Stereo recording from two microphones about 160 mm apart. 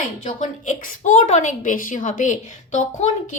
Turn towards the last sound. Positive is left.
turn(degrees=50)  # may be behind; listen again after turning